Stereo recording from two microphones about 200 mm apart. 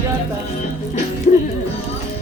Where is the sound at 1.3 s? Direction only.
35° left (ahead or behind).